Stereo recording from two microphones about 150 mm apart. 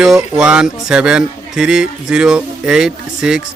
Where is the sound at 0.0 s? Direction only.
5° right (ahead or behind).